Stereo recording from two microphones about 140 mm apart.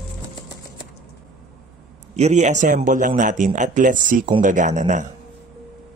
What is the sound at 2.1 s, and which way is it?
A man's voice, 55° right (ahead or behind).